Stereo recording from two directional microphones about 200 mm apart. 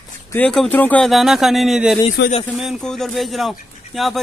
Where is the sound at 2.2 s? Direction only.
60° left (ahead or behind).